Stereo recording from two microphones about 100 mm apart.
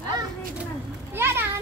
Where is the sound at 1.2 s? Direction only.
25° right (ahead or behind).